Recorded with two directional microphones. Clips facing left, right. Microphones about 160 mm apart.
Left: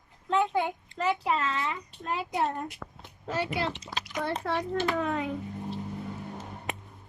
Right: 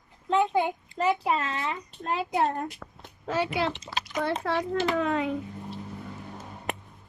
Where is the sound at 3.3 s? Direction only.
90° right.